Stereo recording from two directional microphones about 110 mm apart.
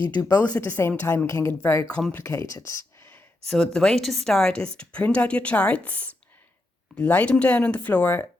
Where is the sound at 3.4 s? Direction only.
5° left (ahead or behind).